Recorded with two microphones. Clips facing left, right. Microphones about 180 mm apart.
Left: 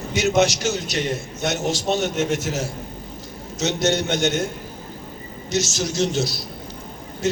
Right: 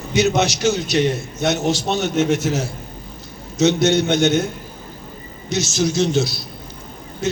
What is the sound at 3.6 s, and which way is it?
Speech, 45° left (ahead or behind).